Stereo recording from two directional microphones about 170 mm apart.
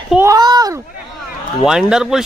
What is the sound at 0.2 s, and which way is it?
Children playing, 20° right (ahead or behind).